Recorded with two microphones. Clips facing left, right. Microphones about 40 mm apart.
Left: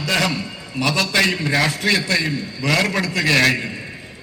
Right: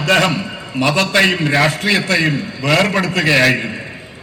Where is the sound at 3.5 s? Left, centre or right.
Right.